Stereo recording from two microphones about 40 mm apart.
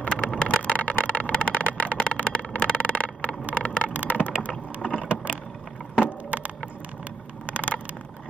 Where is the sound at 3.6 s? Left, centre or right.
Left.